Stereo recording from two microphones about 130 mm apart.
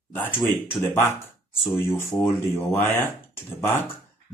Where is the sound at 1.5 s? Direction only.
20° left (ahead or behind).